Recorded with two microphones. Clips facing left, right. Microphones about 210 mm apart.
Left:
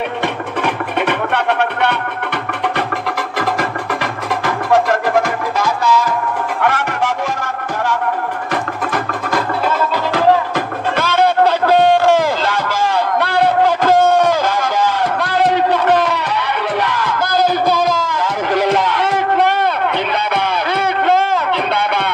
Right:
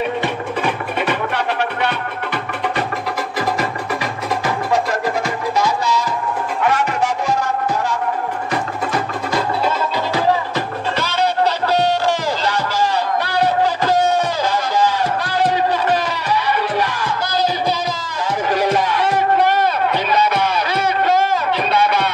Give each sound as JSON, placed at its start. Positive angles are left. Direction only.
{"t": 0.6, "sound": "music", "side_deg": 60}
{"t": 4.0, "sound": "music", "side_deg": 55}
{"t": 8.9, "sound": "music", "side_deg": 55}
{"t": 18.2, "sound": "a sound", "side_deg": 60}